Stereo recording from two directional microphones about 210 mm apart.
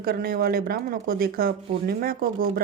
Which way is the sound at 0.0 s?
45° right (ahead or behind).